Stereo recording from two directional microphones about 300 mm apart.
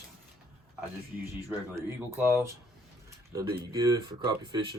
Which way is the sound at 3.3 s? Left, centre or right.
Centre.